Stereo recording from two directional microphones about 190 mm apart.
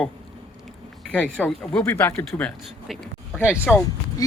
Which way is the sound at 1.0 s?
5° left (ahead or behind).